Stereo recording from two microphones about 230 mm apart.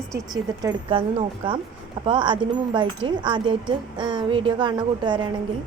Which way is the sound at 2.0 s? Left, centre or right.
Right.